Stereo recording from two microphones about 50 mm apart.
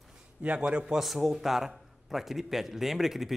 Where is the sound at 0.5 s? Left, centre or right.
Centre.